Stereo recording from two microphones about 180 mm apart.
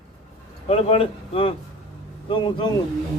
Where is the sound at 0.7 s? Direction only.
35° left (ahead or behind).